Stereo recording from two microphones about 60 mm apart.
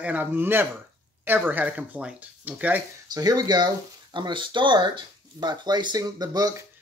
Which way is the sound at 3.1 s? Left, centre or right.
Right.